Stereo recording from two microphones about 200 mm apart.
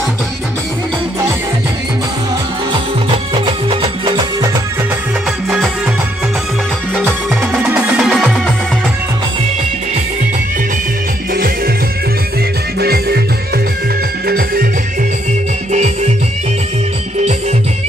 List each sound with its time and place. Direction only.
3.3 s music: 25° right (ahead or behind)
7.1 s music: 5° right (ahead or behind)
11.3 s music: 45° right (ahead or behind)
12.7 s music: 50° right (ahead or behind)
14.2 s music: 45° right (ahead or behind)
15.7 s music: 35° right (ahead or behind)